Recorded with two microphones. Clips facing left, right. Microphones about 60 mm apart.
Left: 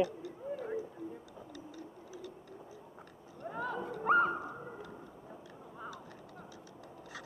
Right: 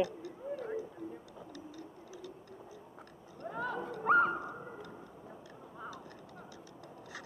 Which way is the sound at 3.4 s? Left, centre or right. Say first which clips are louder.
Even; centre.